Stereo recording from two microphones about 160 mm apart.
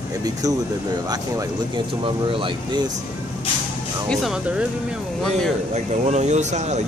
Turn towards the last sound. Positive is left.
turn(degrees=-45)  # may be behind; listen again after turning